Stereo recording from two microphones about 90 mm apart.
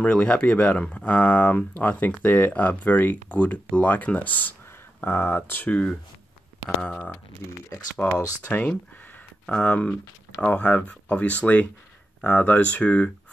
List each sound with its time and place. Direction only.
0.0 s speech: 10° left (ahead or behind)